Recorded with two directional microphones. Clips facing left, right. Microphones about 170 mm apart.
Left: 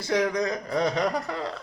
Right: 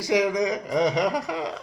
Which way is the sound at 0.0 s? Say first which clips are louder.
Right 3 dB; 10° right (ahead or behind).